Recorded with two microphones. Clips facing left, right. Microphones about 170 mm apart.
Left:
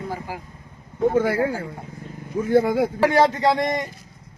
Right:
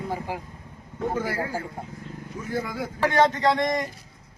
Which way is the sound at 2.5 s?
30° left (ahead or behind).